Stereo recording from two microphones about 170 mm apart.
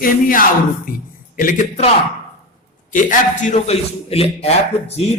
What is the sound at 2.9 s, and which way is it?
A man's voice, 50° left (ahead or behind).